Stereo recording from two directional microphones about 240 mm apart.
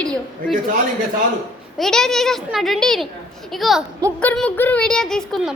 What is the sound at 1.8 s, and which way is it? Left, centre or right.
A child's voice, centre.